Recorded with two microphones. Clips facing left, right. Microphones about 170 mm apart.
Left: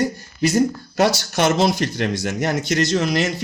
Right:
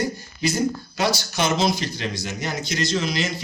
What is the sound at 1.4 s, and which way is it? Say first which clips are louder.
Speech: left 4 dB; 65° left (ahead or behind).